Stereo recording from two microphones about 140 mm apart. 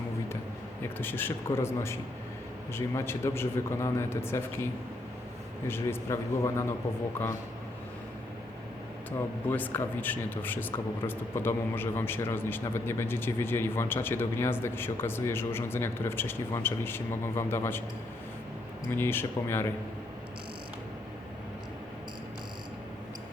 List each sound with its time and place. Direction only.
0.9 s a man's voice: 15° left (ahead or behind)
5.6 s a man's voice: 15° left (ahead or behind)
9.5 s a man's voice: 15° left (ahead or behind)
18.9 s a man's voice: 15° left (ahead or behind)